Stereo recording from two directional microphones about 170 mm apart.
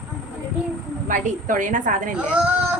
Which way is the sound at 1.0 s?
50° right (ahead or behind).